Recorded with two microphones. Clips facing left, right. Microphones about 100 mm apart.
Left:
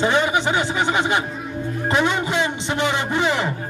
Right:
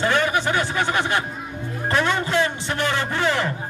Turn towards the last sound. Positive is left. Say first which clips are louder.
# left 1 dB
turn(degrees=20)  # may be behind; listen again after turning